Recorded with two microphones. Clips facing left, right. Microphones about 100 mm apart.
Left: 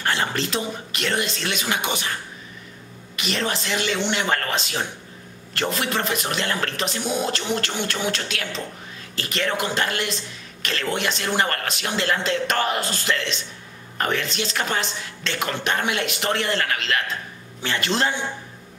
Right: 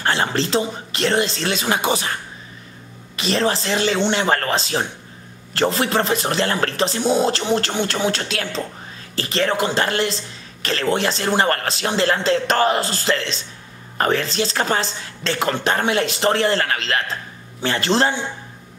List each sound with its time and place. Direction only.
0.0 s speech: 30° right (ahead or behind)
3.2 s speech: 35° right (ahead or behind)